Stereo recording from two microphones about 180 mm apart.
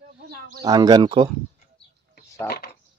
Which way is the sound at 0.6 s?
20° right (ahead or behind).